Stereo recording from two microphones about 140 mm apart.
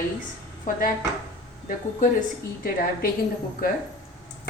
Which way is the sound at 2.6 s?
90° left.